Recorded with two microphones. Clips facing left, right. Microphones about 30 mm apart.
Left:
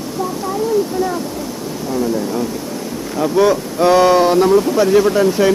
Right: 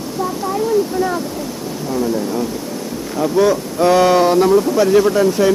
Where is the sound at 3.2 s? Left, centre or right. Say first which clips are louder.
Left 1 dB; centre.